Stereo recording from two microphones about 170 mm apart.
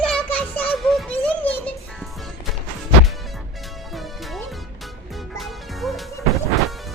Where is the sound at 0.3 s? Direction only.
10° left (ahead or behind).